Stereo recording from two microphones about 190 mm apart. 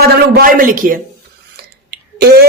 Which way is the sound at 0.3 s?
45° right (ahead or behind).